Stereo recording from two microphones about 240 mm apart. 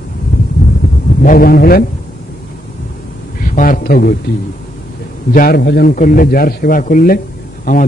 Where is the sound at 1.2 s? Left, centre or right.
Left.